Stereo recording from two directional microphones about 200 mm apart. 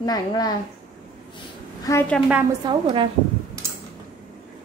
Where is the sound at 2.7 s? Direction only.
25° right (ahead or behind).